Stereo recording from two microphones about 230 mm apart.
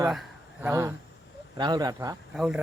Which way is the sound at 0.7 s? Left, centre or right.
Centre.